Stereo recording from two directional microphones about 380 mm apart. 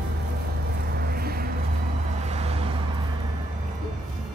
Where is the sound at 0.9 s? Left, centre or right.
Right.